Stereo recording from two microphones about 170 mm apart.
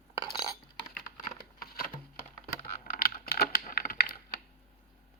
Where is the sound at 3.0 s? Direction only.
60° left (ahead or behind).